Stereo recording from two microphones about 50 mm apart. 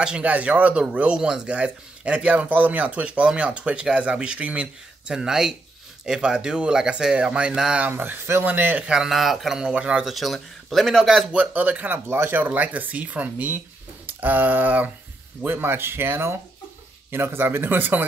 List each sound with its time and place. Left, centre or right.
0.2 s speech: right
8.5 s speech: right
8.7 s speech: centre
9.0 s speech: centre
9.6 s speech: centre
10.0 s speech: centre
11.3 s speech: right
12.1 s speech: right
14.0 s a sound: right
15.4 s speech: right